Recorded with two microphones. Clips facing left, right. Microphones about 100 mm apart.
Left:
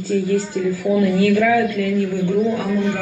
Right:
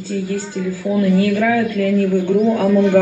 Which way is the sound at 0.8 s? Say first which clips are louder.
Right 1 dB; 30° right (ahead or behind).